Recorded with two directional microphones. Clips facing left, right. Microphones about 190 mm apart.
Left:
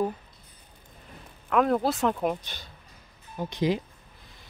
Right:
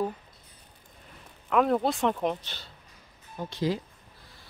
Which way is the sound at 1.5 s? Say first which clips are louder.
Left 1 dB; centre (ahead or behind).